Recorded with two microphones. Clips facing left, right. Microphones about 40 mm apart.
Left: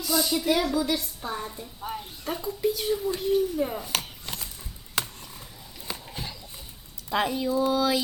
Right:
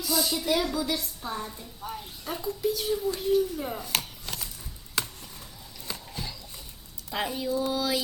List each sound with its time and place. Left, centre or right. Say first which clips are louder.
0.0 s a woman's voice: left 3 dB; centre
5.9 s a sound: left 1 dB; centre
7.1 s speech: left 4 dB; left
7.7 s mantra: left 4 dB; left